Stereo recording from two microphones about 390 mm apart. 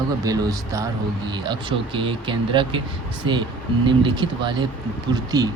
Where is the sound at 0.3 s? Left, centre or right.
Centre.